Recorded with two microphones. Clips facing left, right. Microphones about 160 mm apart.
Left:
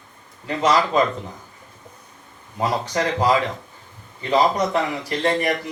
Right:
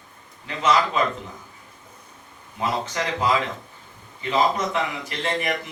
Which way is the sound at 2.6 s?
35° left (ahead or behind).